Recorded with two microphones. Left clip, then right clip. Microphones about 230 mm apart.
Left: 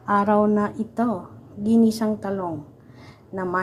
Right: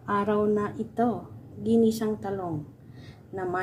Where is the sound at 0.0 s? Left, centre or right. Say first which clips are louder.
Left 6 dB; centre.